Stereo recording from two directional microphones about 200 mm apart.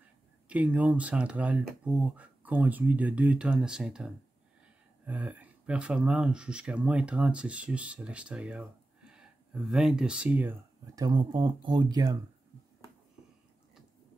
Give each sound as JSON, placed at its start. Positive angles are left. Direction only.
{"t": 0.5, "sound": "speech", "side_deg": -5}
{"t": 11.0, "sound": "speech", "side_deg": -20}